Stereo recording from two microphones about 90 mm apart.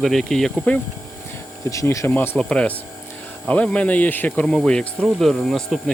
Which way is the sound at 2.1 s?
20° left (ahead or behind).